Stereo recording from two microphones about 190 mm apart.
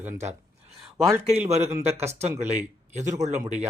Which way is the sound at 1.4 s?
35° right (ahead or behind).